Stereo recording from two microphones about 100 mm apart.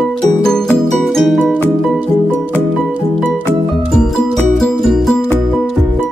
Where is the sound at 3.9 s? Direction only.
5° left (ahead or behind).